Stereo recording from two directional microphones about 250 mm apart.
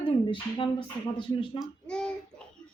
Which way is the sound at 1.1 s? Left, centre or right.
Centre.